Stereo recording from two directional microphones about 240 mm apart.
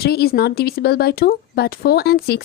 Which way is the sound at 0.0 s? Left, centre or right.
Left.